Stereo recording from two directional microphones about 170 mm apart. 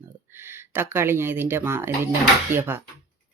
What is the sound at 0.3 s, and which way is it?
Speech, 15° right (ahead or behind).